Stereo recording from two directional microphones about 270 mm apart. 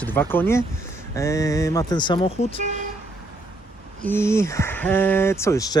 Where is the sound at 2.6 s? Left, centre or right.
Right.